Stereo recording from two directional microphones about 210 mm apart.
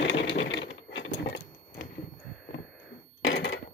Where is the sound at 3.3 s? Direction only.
65° left (ahead or behind).